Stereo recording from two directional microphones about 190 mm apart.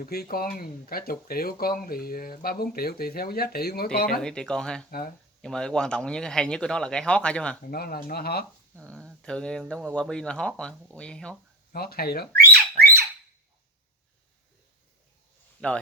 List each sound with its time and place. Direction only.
0.0 s speech: 50° left (ahead or behind)
4.2 s speech: 5° left (ahead or behind)
4.9 s speech: 50° left (ahead or behind)
5.4 s speech: 5° left (ahead or behind)
7.7 s speech: 50° left (ahead or behind)
8.9 s speech: 5° left (ahead or behind)
11.7 s speech: 55° left (ahead or behind)
15.6 s speech: 5° left (ahead or behind)